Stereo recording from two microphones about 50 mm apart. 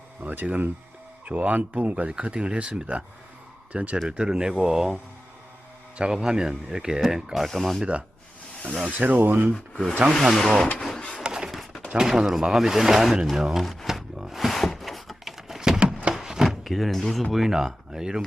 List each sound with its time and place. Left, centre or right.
0.2 s speech: right
2.0 s speech: centre
4.2 s speech: centre
6.0 s speech: centre
7.4 s speech: centre
8.9 s speech: right
9.5 s speech: centre
10.8 s printer: centre
11.2 s a sound: centre
11.9 s speech: centre
13.8 s a sound: centre
16.1 s chopping: centre
16.7 s speech: centre